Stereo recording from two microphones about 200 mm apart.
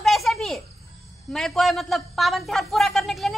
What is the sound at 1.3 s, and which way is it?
A man's voice, centre (ahead or behind).